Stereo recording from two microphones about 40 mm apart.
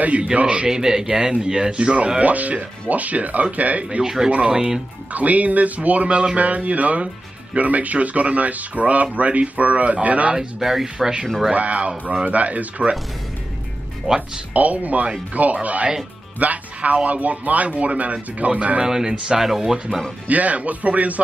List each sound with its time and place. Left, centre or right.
0.0 s speech: right
0.7 s speech: centre
2.2 s speech: right
4.0 s speech: centre
4.3 s speech: right
5.1 s speech: right
10.3 s speech: centre
11.5 s speech: right
14.0 s speech: centre
14.5 s speech: right
18.9 s speech: centre
20.2 s speech: right